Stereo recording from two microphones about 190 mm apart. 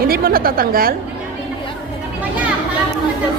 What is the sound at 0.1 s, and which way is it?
Speech, 50° right (ahead or behind).